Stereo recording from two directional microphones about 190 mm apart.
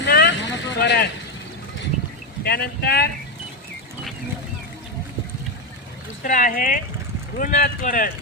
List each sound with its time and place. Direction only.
0.0 s vehicle: 65° left (ahead or behind)
2.4 s speech: 55° left (ahead or behind)
6.2 s speech: 45° left (ahead or behind)